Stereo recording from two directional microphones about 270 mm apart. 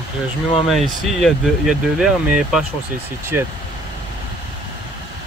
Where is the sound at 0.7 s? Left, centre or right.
Centre.